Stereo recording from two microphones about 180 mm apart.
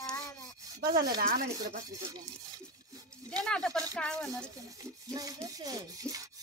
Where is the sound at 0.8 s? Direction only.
55° right (ahead or behind).